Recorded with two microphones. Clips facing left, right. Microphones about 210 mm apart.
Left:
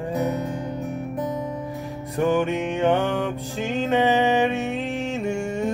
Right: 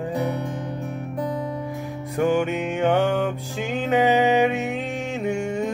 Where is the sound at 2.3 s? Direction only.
10° right (ahead or behind).